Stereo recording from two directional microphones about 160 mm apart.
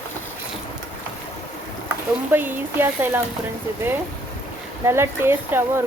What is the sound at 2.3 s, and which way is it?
Speech, 10° right (ahead or behind).